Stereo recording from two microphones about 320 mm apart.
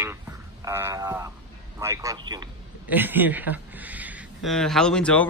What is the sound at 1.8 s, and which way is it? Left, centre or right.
A man's voice, centre.